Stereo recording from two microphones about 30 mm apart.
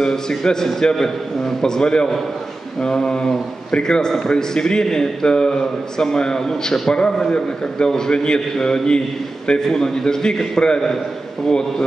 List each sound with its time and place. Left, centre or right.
0.0 s a man's voice: centre